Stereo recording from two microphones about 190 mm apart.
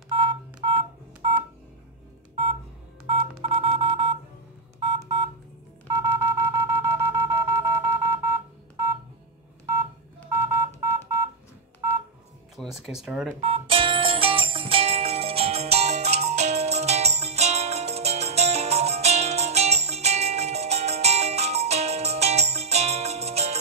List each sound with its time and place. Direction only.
0.1 s telephone dialing: 25° right (ahead or behind)
3.1 s telephone dialing: 30° right (ahead or behind)
5.9 s wind instrument: 15° right (ahead or behind)
10.3 s telephone dialing: 15° right (ahead or behind)
12.5 s music: centre (ahead or behind)
13.4 s music: 30° right (ahead or behind)